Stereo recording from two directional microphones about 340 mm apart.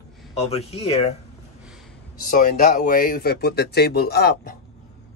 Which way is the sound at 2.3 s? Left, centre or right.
Left.